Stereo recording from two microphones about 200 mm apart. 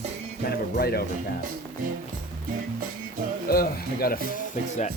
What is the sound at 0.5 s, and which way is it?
Speech, 50° left (ahead or behind).